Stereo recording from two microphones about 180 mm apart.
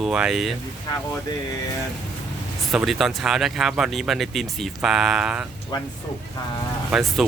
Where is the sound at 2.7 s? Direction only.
Centre (ahead or behind).